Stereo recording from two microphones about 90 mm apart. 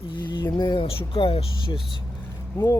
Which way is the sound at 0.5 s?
55° left (ahead or behind).